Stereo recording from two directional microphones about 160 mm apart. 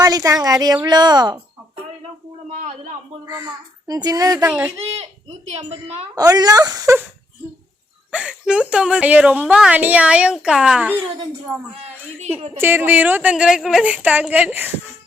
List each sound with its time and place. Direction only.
0.0 s a child's voice: 20° right (ahead or behind)
2.6 s a man's voice: 50° right (ahead or behind)
3.2 s a child's voice: 25° right (ahead or behind)
6.1 s a child's voice: 25° right (ahead or behind)
8.1 s a woman's voice: 5° right (ahead or behind)
12.5 s a woman's voice: 15° right (ahead or behind)